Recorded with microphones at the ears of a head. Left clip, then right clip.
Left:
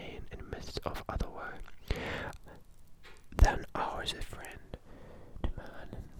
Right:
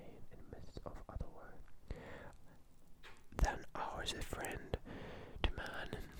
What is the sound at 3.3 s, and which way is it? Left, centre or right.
Whispering, left.